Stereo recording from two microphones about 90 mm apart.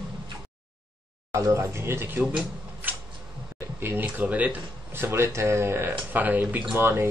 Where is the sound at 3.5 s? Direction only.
25° right (ahead or behind).